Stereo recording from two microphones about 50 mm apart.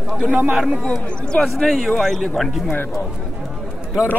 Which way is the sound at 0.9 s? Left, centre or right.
Centre.